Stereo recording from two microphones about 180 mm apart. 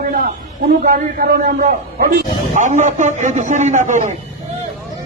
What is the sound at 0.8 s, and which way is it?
A man's voice, 55° right (ahead or behind).